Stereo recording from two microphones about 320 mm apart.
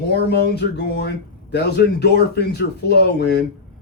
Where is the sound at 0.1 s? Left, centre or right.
Left.